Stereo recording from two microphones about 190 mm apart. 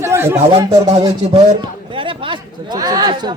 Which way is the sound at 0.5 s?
30° right (ahead or behind).